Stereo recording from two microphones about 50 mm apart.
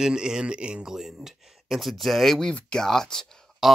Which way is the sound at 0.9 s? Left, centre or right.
Centre.